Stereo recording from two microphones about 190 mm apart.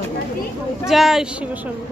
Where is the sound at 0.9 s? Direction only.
Centre (ahead or behind).